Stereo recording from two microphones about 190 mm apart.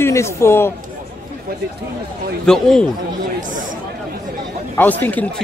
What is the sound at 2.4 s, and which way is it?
Speech, 5° left (ahead or behind).